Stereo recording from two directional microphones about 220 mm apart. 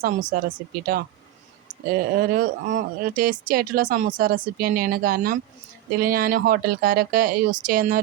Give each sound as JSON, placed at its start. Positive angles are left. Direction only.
{"t": 0.0, "sound": "speech", "side_deg": -40}